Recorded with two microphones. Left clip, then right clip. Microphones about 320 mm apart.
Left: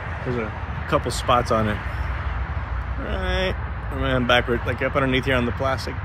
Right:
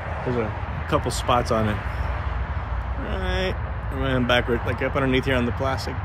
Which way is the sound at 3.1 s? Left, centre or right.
Centre.